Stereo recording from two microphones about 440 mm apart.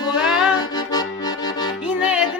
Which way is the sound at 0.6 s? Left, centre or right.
Centre.